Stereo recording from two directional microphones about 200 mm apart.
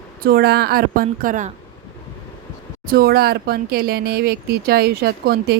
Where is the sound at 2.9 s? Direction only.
50° right (ahead or behind).